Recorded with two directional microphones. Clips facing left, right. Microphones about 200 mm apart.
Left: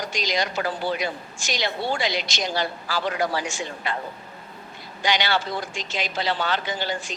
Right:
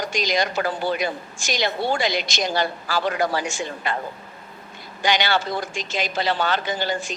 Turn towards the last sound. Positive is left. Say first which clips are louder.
# right 3 dB
turn(degrees=-45)  # may be behind; listen again after turning